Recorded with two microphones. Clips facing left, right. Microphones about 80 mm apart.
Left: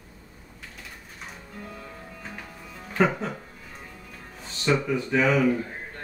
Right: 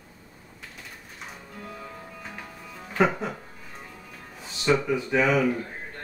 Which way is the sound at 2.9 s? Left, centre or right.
Centre.